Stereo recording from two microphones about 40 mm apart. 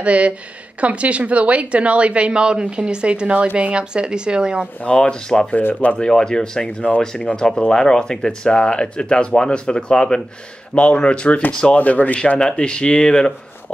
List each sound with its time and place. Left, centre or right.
0.0 s a woman's voice: right
4.8 s speech: left
5.6 s speech: left
5.9 s speech: centre
11.8 s speech: left
12.4 s speech: centre